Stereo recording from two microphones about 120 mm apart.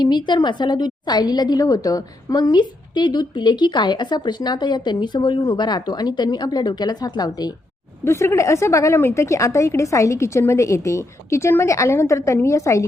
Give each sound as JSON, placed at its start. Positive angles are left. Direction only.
{"t": 0.0, "sound": "a woman's voice", "side_deg": 35}
{"t": 8.0, "sound": "a woman's voice", "side_deg": 20}